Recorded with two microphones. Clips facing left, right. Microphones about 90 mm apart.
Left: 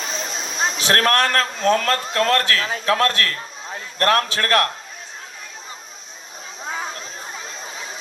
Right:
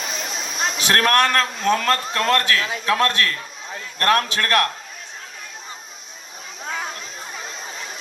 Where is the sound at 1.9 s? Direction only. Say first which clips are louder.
Left 1 dB; 35° left (ahead or behind).